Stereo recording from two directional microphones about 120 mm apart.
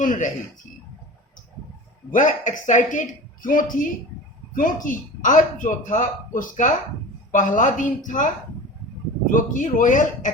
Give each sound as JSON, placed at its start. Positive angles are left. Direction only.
{"t": 0.0, "sound": "speech", "side_deg": 90}
{"t": 2.0, "sound": "speech", "side_deg": 90}